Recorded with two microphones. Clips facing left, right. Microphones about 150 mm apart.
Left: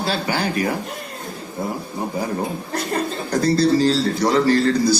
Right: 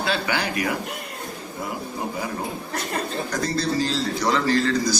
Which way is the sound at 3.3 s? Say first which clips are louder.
Left 11 dB; 35° left (ahead or behind).